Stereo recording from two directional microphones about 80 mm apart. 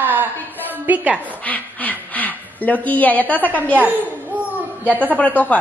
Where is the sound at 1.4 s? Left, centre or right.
Centre.